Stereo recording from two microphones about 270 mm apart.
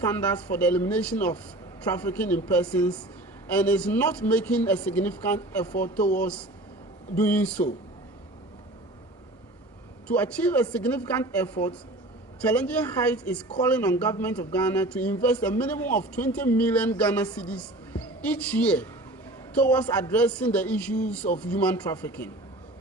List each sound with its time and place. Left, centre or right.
0.0 s speech: centre
10.1 s speech: centre